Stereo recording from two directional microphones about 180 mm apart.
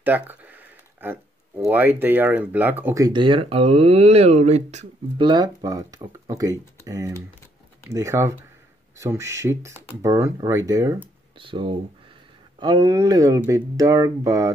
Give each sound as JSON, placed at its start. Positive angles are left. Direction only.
{"t": 0.0, "sound": "a sound", "side_deg": -10}
{"t": 1.0, "sound": "speech", "side_deg": -10}
{"t": 5.2, "sound": "speech", "side_deg": -25}